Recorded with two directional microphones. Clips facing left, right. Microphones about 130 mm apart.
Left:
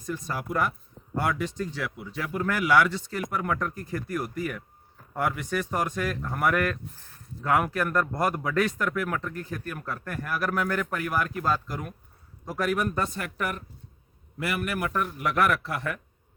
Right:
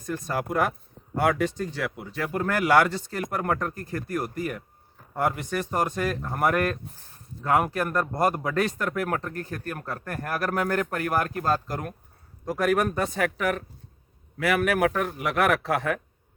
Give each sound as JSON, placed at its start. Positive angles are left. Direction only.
{"t": 0.0, "sound": "speech", "side_deg": -55}
{"t": 8.8, "sound": "a man's voice", "side_deg": -45}